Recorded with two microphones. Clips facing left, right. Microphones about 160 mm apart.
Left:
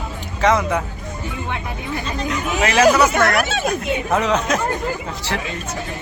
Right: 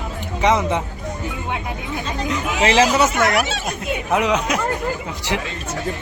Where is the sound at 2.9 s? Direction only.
20° right (ahead or behind).